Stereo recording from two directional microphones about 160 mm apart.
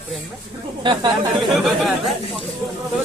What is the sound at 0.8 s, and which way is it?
Speech, 25° right (ahead or behind).